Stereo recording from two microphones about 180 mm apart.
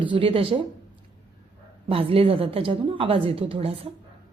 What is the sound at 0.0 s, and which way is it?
Speech, 30° right (ahead or behind).